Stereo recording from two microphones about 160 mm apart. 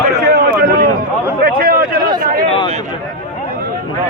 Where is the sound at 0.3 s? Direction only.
80° right.